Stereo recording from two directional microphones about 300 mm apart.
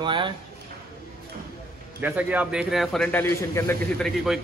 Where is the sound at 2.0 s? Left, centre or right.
Centre.